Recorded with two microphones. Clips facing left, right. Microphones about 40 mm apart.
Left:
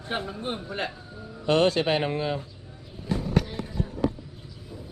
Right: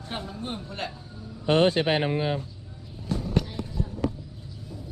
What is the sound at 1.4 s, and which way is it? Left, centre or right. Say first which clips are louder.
Speech: even; right.